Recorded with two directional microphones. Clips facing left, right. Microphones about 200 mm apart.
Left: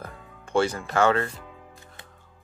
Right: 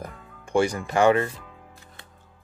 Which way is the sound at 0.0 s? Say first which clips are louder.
Right 2 dB; 15° right (ahead or behind).